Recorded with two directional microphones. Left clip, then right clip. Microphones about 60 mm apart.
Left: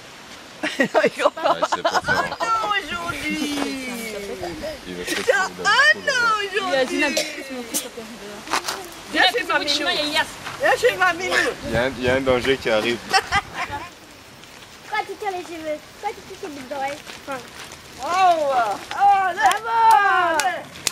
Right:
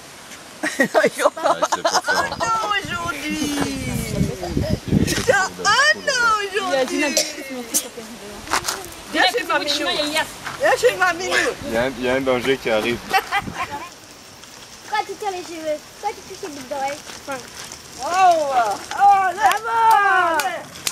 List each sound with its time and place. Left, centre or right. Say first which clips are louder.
0.6 s speech: right 2 dB; centre
2.4 s speech: right 1 dB; centre
3.6 s a sound: right 1 dB; centre
5.0 s speech: right 1 dB; centre
9.6 s speech: even; left
10.6 s speech: right 1 dB; centre
11.7 s speech: left 1 dB; left
14.9 s a sound: right 2 dB; left
16.7 s speech: right 2 dB; left